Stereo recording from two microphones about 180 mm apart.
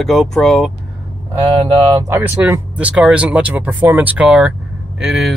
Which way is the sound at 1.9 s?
10° right (ahead or behind).